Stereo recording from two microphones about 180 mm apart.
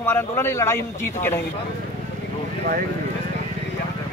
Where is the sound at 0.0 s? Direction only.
15° left (ahead or behind).